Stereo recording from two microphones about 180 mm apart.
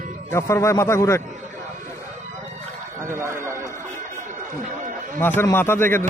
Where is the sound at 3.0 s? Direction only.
15° right (ahead or behind).